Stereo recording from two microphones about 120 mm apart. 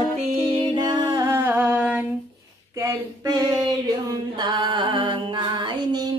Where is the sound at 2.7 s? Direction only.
30° right (ahead or behind).